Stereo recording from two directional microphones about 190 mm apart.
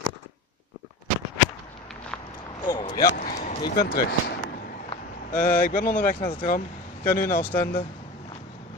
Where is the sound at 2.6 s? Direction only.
20° left (ahead or behind).